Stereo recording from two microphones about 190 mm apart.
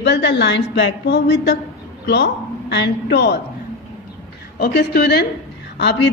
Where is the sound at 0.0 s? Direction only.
65° left (ahead or behind).